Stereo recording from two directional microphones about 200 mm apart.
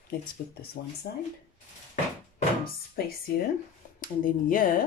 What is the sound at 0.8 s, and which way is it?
Speech, 55° left (ahead or behind).